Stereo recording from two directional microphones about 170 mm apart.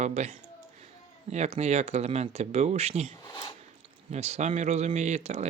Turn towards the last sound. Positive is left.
turn(degrees=-40)  # may be behind; listen again after turning